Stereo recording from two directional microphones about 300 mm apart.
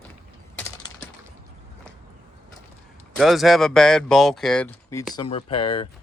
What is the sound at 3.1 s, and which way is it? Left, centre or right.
Speech, centre.